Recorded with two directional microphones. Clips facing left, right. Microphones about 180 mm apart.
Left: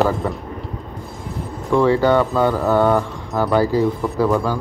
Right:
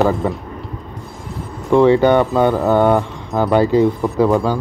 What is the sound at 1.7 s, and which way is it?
Speech, 20° right (ahead or behind).